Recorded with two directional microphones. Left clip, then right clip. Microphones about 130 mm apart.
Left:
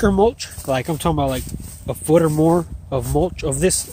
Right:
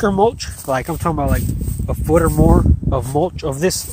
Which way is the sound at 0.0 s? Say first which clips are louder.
Right 1 dB; 40° left (ahead or behind).